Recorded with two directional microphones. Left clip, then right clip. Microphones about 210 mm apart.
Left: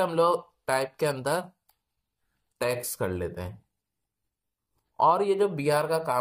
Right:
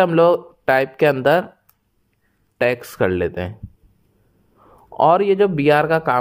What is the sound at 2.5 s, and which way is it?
Speech, 40° right (ahead or behind).